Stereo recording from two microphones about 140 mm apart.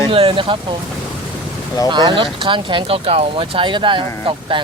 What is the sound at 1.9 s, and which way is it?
Speech, 35° right (ahead or behind).